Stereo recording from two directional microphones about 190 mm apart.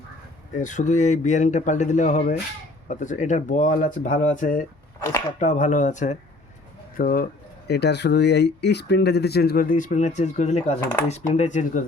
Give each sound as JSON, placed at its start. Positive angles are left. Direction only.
{"t": 0.5, "sound": "speech", "side_deg": 40}
{"t": 7.7, "sound": "speech", "side_deg": 60}